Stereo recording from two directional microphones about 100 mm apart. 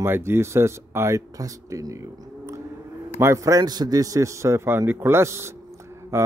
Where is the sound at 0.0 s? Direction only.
25° right (ahead or behind).